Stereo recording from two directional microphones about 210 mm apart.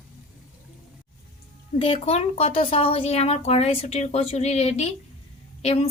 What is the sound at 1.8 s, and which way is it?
Speech, 25° left (ahead or behind).